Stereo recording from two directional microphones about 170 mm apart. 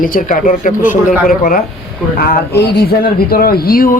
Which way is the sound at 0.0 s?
55° left (ahead or behind).